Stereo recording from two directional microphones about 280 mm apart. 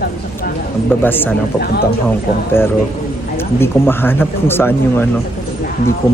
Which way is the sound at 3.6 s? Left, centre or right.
Centre.